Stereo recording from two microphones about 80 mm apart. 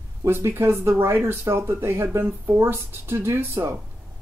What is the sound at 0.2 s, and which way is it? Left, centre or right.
Speech, right.